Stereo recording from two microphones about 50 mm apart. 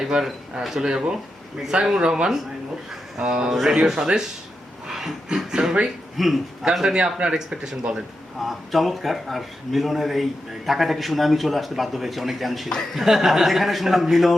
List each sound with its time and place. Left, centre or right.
0.0 s a man's voice: centre
8.4 s a man's voice: centre